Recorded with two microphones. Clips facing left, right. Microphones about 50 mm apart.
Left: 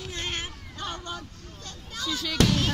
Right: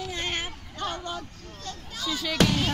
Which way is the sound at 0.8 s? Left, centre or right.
Centre.